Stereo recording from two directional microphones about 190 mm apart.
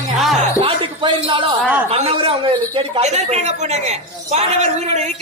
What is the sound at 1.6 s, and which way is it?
Speech, 5° right (ahead or behind).